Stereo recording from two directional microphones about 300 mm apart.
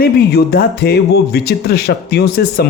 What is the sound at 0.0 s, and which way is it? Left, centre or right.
Speech, left.